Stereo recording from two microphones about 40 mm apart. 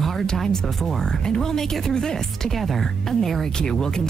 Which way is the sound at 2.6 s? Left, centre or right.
Centre.